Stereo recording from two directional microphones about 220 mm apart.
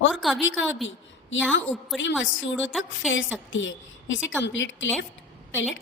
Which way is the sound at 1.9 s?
Centre (ahead or behind).